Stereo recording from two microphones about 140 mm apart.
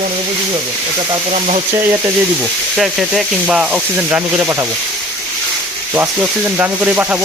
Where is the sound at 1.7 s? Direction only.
20° right (ahead or behind).